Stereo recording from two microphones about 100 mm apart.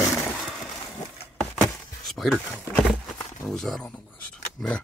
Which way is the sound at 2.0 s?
Centre (ahead or behind).